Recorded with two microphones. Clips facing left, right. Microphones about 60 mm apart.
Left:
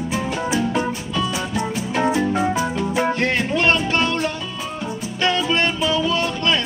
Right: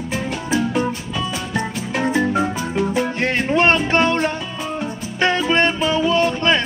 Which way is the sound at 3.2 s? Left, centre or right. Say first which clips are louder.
Right 6 dB; right.